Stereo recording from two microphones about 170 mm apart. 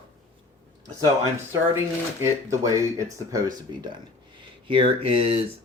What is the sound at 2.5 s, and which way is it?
Speech, 20° right (ahead or behind).